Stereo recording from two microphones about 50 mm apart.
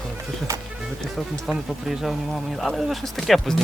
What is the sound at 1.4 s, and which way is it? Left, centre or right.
Speech, centre.